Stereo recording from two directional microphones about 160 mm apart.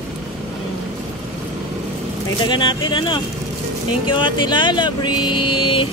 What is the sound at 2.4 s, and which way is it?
Speech, 30° left (ahead or behind).